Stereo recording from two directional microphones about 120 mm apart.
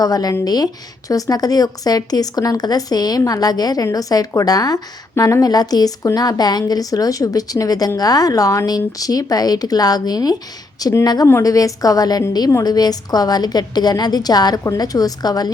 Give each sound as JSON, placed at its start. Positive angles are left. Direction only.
{"t": 0.0, "sound": "a woman's voice", "side_deg": 30}